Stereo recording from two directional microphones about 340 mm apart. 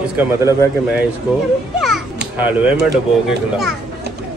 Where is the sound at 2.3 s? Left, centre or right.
Centre.